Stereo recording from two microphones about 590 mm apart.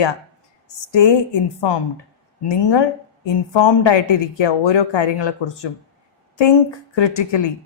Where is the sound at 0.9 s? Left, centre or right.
Left.